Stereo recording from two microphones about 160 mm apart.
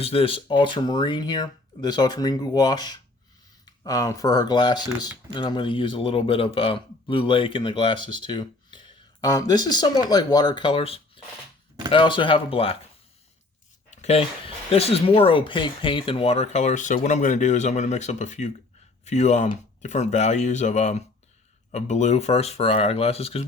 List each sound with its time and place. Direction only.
0.0 s speech: 35° left (ahead or behind)
13.9 s speech: 45° left (ahead or behind)